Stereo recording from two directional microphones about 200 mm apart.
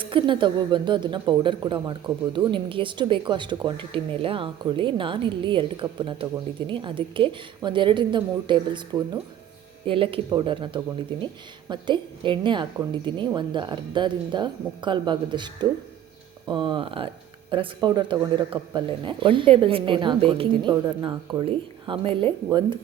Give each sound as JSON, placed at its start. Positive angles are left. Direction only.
{"t": 0.0, "sound": "speech", "side_deg": -25}